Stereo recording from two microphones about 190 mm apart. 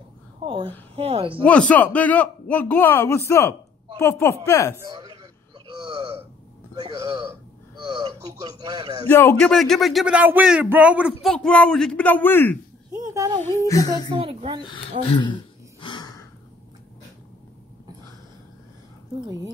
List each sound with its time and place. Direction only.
0.4 s a woman's voice: 30° right (ahead or behind)
1.4 s a man's voice: 5° left (ahead or behind)
4.7 s a sound: 20° right (ahead or behind)
6.7 s a woman's voice: 20° right (ahead or behind)
9.1 s a man's voice: 10° left (ahead or behind)
9.5 s speech: centre (ahead or behind)
11.2 s speech: 5° left (ahead or behind)
12.9 s a sound: 15° right (ahead or behind)
13.6 s a man's voice: 15° left (ahead or behind)
14.1 s a sound: 30° right (ahead or behind)
14.6 s speech: 25° left (ahead or behind)
15.0 s gasp: 25° left (ahead or behind)